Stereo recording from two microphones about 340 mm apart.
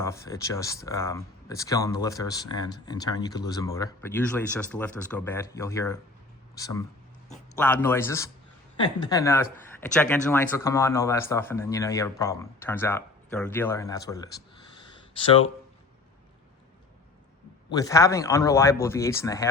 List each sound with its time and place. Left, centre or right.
0.0 s speech: centre
7.5 s speech: centre
17.7 s speech: centre